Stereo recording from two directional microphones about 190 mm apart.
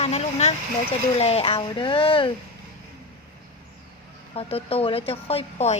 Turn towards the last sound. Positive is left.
turn(degrees=30)  # may be behind; listen again after turning